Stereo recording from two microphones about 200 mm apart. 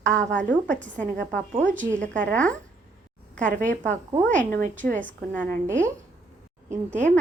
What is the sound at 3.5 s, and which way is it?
A woman's voice, 40° right (ahead or behind).